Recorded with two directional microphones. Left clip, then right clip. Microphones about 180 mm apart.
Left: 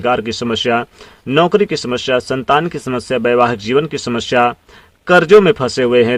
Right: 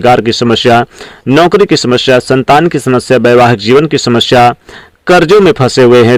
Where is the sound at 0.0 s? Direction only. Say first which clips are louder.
Right 9 dB; 45° right (ahead or behind).